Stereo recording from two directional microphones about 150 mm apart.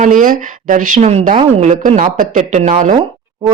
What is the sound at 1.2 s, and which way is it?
Speech, 60° right (ahead or behind).